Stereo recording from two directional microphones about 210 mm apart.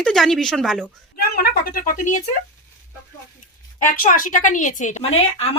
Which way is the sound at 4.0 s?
40° left (ahead or behind).